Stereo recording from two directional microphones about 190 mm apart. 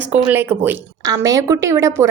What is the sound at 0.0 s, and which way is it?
Speech, 10° right (ahead or behind).